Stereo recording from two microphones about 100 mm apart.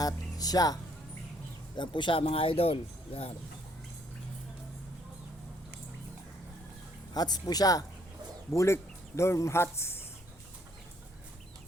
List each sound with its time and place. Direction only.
0.0 s speech: 40° left (ahead or behind)
1.7 s speech: 50° left (ahead or behind)
2.2 s speech: 70° left (ahead or behind)
7.1 s a woman's voice: 40° left (ahead or behind)
8.5 s speech: 30° left (ahead or behind)